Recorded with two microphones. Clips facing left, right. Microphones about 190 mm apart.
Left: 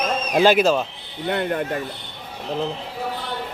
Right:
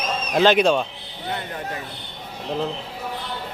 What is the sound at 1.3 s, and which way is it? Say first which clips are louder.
Speech: left 7 dB; 60° left (ahead or behind).